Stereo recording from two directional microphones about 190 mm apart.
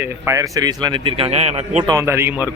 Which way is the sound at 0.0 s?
15° right (ahead or behind).